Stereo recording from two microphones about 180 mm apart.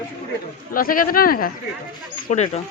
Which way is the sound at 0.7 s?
50° left (ahead or behind).